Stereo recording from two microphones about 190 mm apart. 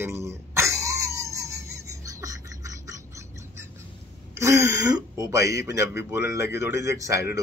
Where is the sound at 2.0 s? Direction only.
15° right (ahead or behind).